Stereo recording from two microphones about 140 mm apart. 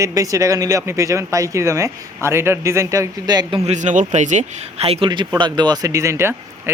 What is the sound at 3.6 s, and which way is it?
A man's voice, 55° right (ahead or behind).